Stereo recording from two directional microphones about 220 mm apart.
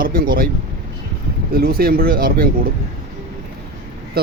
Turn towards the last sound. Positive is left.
turn(degrees=-45)  # may be behind; listen again after turning